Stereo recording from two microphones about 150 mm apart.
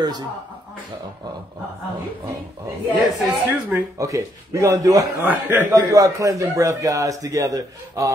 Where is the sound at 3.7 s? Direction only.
20° right (ahead or behind).